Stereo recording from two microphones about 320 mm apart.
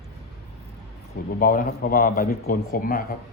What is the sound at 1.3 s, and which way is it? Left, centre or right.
Speech, left.